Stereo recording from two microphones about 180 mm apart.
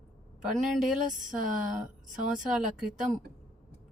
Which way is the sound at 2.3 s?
5° right (ahead or behind).